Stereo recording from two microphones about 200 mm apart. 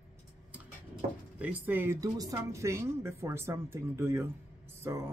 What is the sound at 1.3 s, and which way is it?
A woman's voice, 5° right (ahead or behind).